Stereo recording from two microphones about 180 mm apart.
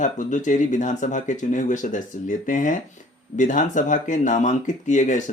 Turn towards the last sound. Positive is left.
turn(degrees=45)  # may be behind; listen again after turning